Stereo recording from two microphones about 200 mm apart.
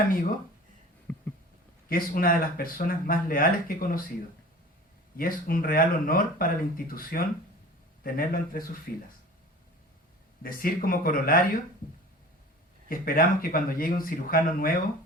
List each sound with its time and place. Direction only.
1.1 s a sound: 10° left (ahead or behind)
1.9 s speech: 45° left (ahead or behind)
5.1 s speech: 45° left (ahead or behind)
10.4 s speech: 45° left (ahead or behind)
12.9 s speech: 45° left (ahead or behind)